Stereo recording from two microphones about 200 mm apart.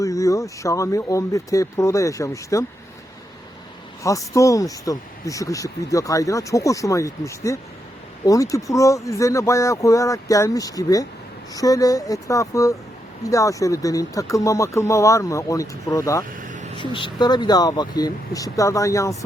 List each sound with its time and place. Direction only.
0.0 s speech: 15° left (ahead or behind)
4.0 s speech: 15° left (ahead or behind)
16.3 s vehicle: 40° right (ahead or behind)
16.7 s speech: 25° left (ahead or behind)